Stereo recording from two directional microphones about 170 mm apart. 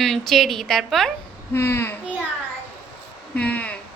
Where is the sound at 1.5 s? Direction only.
15° left (ahead or behind).